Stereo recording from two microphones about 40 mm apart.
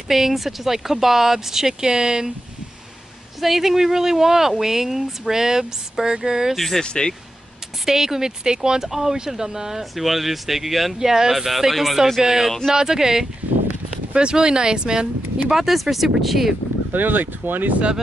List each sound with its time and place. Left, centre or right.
0.1 s speech: centre
3.3 s speech: centre
6.5 s speech: centre
6.8 s speech: left
7.8 s speech: centre
15.5 s speech: centre
16.9 s speech: right